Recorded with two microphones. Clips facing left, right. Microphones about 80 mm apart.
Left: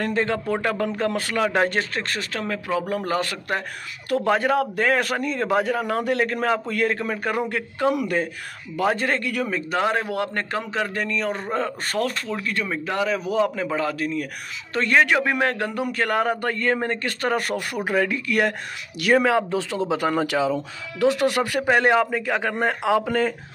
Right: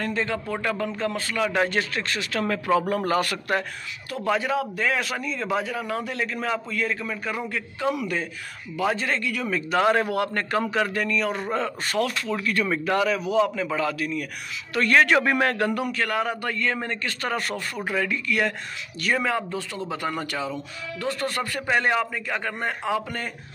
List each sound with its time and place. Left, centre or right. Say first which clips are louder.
0.0 s a man's voice: left 4 dB; left
0.9 s a man's voice: left 3 dB; left
1.4 s speech: left 2 dB; left
2.4 s a man's voice: right 4 dB; centre
4.1 s a man's voice: left 4 dB; left
9.5 s a man's voice: right 4 dB; left
12.3 s a man's voice: right 2 dB; left
13.1 s speech: even; left
14.7 s a man's voice: even; left
15.8 s a man's voice: left 3 dB; left
21.6 s a man's voice: left 4 dB; left
22.1 s a man's voice: left 5 dB; left
22.6 s speech: left 6 dB; left